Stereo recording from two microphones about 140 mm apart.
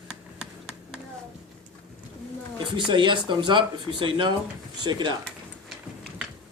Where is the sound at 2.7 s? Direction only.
35° right (ahead or behind).